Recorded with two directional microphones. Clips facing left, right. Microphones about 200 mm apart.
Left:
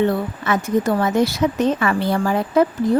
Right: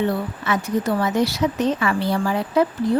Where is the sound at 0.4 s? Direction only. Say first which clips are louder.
Left 3 dB; 50° left (ahead or behind).